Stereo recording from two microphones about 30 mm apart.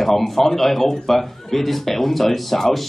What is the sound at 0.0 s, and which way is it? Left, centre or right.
Speech, centre.